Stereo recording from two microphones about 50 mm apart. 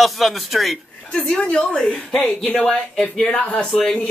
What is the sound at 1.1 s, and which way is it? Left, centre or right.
A woman's voice, centre.